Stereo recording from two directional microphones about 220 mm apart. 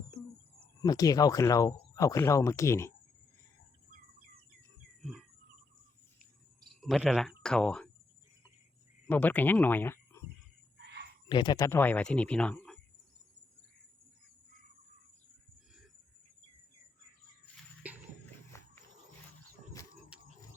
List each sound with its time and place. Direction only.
0.8 s speech: 15° left (ahead or behind)
6.8 s speech: 5° right (ahead or behind)
9.0 s speech: 10° left (ahead or behind)
10.8 s a sound: 50° right (ahead or behind)
11.3 s speech: 20° left (ahead or behind); by 12.8 s 5° left (ahead or behind)
17.8 s a sound: 5° right (ahead or behind)